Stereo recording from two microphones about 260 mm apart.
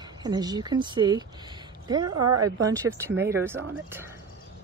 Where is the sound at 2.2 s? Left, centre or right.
Right.